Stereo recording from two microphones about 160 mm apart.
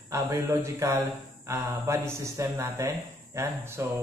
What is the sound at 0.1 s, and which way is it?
Speech, 20° right (ahead or behind).